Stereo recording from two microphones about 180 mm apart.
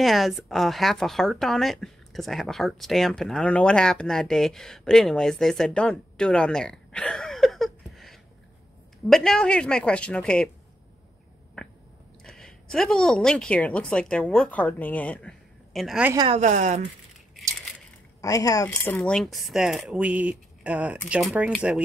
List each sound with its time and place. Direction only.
0.0 s a woman's voice: centre (ahead or behind)
12.2 s a woman's voice: centre (ahead or behind)
16.3 s speech: 40° right (ahead or behind)
18.2 s speech: 20° left (ahead or behind)
18.7 s a woman's voice: 5° left (ahead or behind)